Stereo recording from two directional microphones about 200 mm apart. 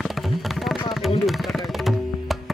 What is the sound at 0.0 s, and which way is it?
Music, centre (ahead or behind).